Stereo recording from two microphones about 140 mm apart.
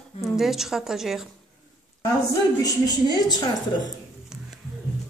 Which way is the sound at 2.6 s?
25° left (ahead or behind).